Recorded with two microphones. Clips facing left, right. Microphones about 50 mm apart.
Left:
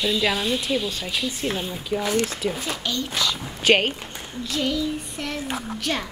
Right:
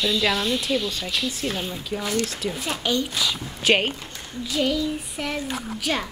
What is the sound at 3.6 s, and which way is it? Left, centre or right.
Child singing, centre.